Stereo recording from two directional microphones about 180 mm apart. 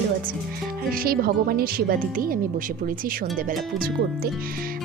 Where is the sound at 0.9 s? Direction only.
55° right (ahead or behind).